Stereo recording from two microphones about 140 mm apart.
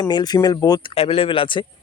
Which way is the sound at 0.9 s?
45° left (ahead or behind).